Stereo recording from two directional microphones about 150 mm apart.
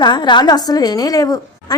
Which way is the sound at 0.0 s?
30° left (ahead or behind).